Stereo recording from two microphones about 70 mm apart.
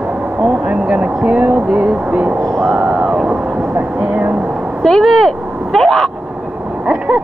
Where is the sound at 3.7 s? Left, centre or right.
Right.